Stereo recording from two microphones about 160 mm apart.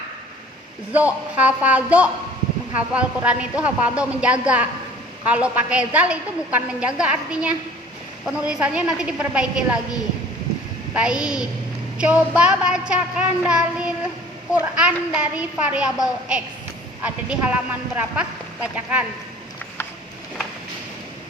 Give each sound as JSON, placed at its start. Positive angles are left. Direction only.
{"t": 0.9, "sound": "a woman's voice", "side_deg": -10}
{"t": 10.9, "sound": "a woman's voice", "side_deg": -5}